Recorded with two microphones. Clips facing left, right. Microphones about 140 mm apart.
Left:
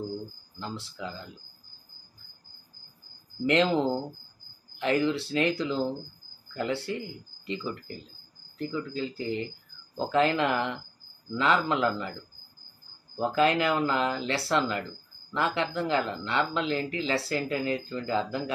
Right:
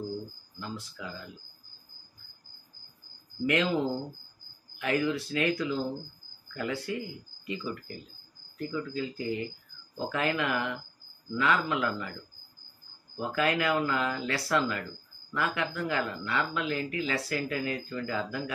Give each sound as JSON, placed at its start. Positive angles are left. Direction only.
{"t": 0.6, "sound": "speech", "side_deg": 30}
{"t": 4.7, "sound": "speech", "side_deg": 30}
{"t": 13.2, "sound": "speech", "side_deg": 25}